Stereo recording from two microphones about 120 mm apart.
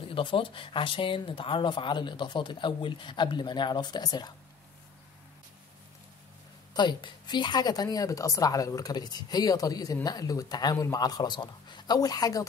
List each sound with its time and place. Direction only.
0.1 s speech: 45° left (ahead or behind)
6.7 s speech: 40° left (ahead or behind)